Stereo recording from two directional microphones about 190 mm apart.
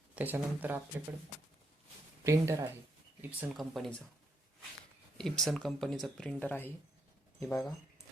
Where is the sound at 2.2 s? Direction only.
15° right (ahead or behind); by 3.9 s centre (ahead or behind).